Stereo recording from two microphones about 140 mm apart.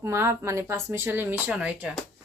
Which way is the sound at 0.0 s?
20° right (ahead or behind).